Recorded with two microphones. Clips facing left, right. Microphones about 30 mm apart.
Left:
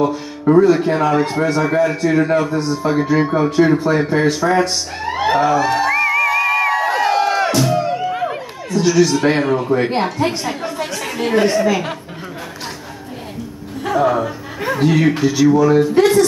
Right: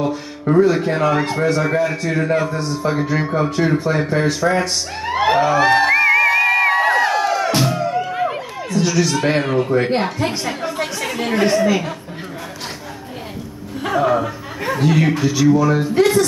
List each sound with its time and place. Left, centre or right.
0.0 s speech: centre
5.6 s speech: right
6.0 s music: right
6.4 s crowd: centre
6.7 s crowd: right
7.1 s music: left
8.2 s a sound: centre
9.2 s speech: centre
10.8 s chatter: centre
11.5 s speech: centre
14.0 s speech: centre